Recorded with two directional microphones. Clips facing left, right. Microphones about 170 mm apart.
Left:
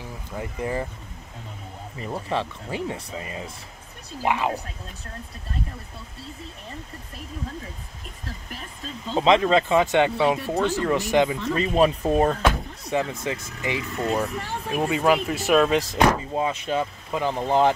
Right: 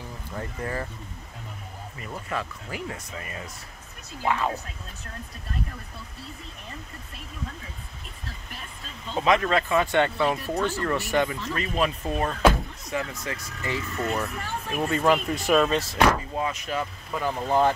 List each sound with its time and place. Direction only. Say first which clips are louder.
0.4 s speech: left 4 dB; 15° left (ahead or behind)
2.0 s speech: left 5 dB; 30° left (ahead or behind)
9.1 s speech: left 4 dB; 25° left (ahead or behind)
11.4 s speech: left 6 dB; 30° left (ahead or behind)
12.9 s speech: left 5 dB; 25° left (ahead or behind); by 15.8 s 5° left (ahead or behind)
15.9 s speech: left 2 dB; 20° left (ahead or behind)